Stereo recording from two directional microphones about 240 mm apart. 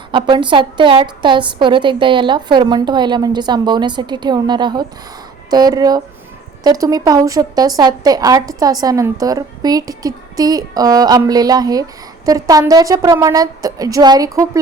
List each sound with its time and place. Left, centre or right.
0.1 s a woman's voice: centre